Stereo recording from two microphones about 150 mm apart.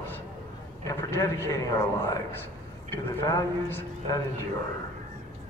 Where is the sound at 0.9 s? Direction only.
20° left (ahead or behind).